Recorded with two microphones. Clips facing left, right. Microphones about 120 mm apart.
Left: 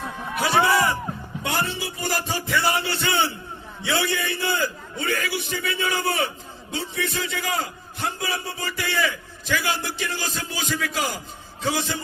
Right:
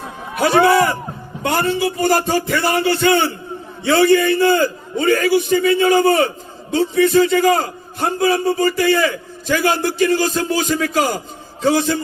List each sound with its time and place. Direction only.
0.3 s music: 50° right (ahead or behind)
1.4 s a man's voice: 55° right (ahead or behind)